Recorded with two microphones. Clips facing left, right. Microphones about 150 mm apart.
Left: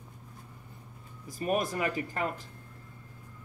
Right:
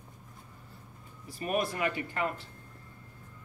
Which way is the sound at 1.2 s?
40° left (ahead or behind).